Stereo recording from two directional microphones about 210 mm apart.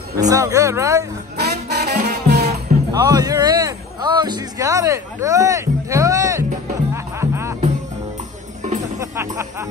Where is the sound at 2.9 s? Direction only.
20° right (ahead or behind).